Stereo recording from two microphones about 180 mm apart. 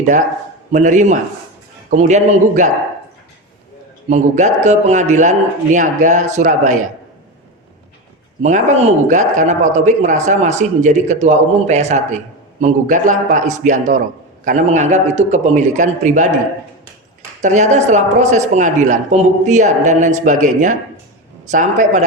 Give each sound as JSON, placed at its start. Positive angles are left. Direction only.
{"t": 0.7, "sound": "speech", "side_deg": -40}
{"t": 4.1, "sound": "speech", "side_deg": -40}
{"t": 8.4, "sound": "speech", "side_deg": -40}
{"t": 17.4, "sound": "a man's voice", "side_deg": -40}